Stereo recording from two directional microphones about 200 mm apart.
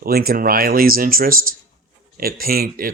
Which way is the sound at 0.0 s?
50° right (ahead or behind).